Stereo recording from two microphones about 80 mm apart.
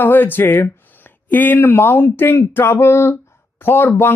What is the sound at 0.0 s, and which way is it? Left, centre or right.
A man's voice, left.